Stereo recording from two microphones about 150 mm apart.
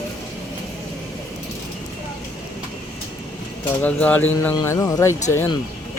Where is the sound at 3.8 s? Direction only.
10° left (ahead or behind).